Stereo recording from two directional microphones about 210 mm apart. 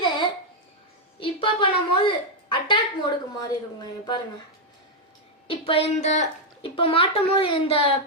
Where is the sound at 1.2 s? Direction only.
25° left (ahead or behind).